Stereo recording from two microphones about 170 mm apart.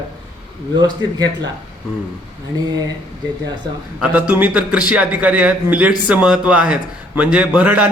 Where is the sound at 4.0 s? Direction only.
10° right (ahead or behind).